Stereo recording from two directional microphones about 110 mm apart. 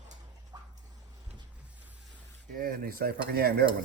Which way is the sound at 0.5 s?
35° right (ahead or behind).